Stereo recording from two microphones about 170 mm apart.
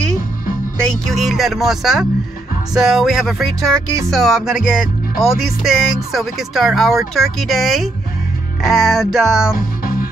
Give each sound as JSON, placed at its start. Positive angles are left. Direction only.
{"t": 0.7, "sound": "speech", "side_deg": 5}